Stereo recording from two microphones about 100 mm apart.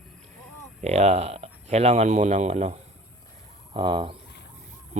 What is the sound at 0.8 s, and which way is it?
Speech, 90° right.